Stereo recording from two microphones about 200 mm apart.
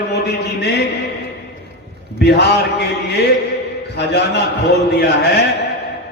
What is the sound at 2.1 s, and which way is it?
Speech, 55° left (ahead or behind).